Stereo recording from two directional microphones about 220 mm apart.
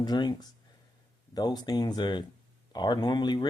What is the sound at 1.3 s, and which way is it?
Speech, 20° left (ahead or behind).